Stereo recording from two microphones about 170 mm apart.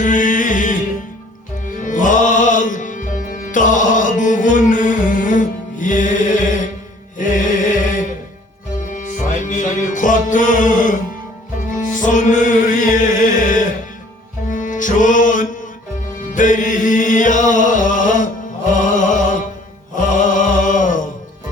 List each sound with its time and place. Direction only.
0.0 s music: 50° left (ahead or behind)
8.9 s music: 50° left (ahead or behind)
20.0 s chant: 50° left (ahead or behind)